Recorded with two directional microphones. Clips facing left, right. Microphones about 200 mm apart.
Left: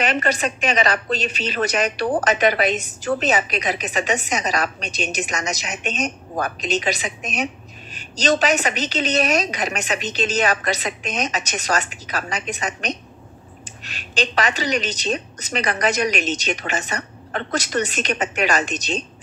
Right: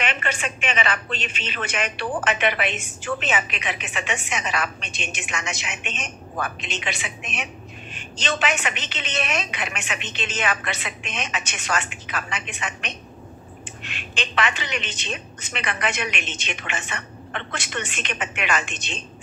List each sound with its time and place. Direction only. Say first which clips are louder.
0.0 s a woman's voice: left 6 dB; 40° left (ahead or behind)